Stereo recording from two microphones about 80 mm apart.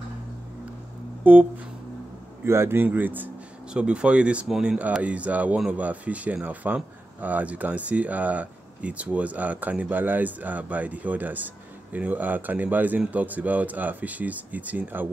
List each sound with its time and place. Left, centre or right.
1.3 s speech: right
2.4 s speech: right
3.7 s speech: centre